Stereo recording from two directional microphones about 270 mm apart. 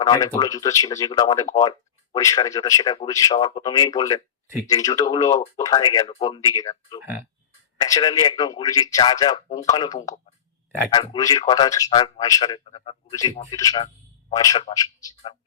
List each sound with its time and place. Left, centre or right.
0.0 s speech: centre